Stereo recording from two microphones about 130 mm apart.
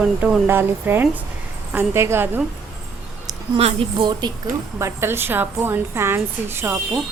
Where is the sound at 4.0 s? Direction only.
35° right (ahead or behind).